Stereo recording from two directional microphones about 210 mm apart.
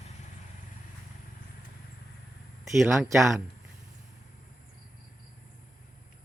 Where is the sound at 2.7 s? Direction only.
Centre (ahead or behind).